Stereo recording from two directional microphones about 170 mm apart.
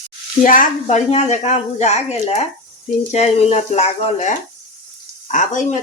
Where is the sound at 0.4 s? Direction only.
50° left (ahead or behind).